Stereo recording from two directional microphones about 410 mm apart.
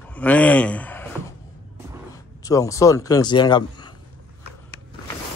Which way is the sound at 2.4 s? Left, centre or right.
Centre.